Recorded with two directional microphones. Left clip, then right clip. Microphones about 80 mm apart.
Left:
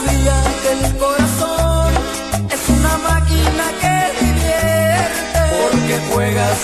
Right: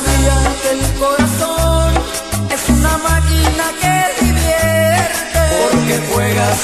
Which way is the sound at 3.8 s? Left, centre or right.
Left.